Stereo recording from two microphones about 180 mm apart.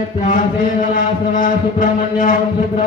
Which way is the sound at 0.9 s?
45° left (ahead or behind).